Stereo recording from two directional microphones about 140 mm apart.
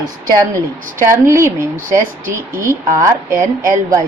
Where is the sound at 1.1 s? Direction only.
20° right (ahead or behind).